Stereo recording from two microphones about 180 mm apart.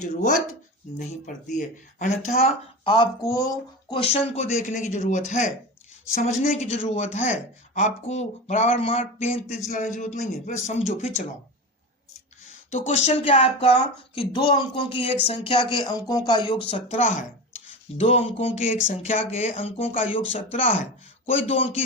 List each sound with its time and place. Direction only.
0.0 s speech: 40° left (ahead or behind)
1.5 s speech: 45° left (ahead or behind)
12.7 s speech: 40° left (ahead or behind)
17.0 s speech: 45° left (ahead or behind)